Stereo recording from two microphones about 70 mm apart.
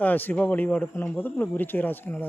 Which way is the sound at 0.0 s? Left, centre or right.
Left.